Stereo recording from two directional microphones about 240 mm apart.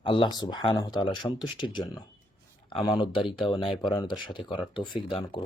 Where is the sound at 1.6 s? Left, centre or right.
Centre.